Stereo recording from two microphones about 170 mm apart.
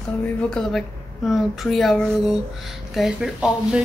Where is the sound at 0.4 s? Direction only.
5° left (ahead or behind).